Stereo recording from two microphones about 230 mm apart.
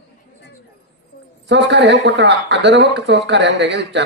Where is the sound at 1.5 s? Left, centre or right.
Right.